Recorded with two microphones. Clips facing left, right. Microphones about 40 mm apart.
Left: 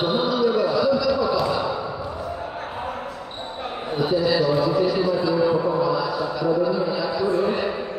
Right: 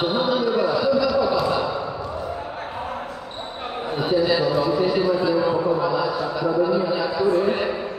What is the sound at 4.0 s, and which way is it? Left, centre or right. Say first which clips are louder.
A man's voice: even; right.